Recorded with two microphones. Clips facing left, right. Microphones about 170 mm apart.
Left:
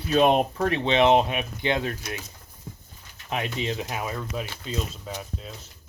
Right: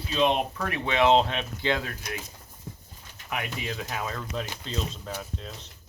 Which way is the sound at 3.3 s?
25° left (ahead or behind).